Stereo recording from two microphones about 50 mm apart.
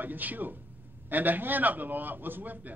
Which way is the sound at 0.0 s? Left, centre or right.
Right.